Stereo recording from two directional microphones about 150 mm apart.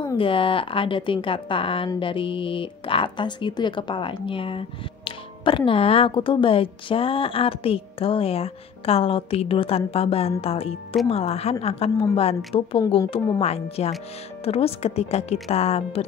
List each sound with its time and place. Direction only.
0.2 s a woman's voice: 35° left (ahead or behind)
13.4 s speech: 45° left (ahead or behind)